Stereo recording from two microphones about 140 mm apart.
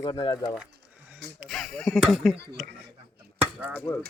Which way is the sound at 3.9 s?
25° left (ahead or behind).